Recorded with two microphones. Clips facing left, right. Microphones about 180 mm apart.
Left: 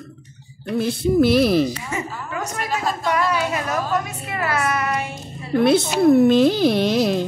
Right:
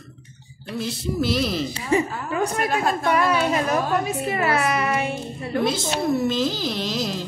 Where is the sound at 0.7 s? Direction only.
55° left (ahead or behind).